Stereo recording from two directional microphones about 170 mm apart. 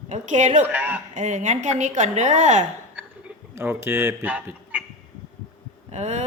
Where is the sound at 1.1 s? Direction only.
45° right (ahead or behind).